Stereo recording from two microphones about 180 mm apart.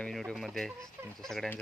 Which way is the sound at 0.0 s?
5° left (ahead or behind).